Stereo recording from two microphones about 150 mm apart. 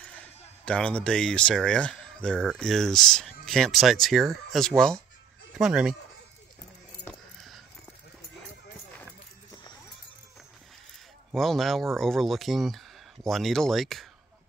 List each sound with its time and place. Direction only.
0.0 s speech: 10° left (ahead or behind)
11.3 s speech: centre (ahead or behind)